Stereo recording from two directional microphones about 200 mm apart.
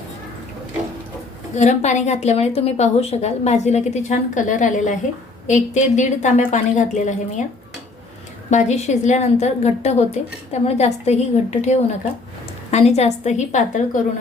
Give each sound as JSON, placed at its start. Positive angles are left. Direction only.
{"t": 1.5, "sound": "a woman's voice", "side_deg": 35}
{"t": 8.4, "sound": "a woman's voice", "side_deg": 35}